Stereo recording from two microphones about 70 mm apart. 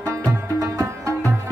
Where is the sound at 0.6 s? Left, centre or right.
Right.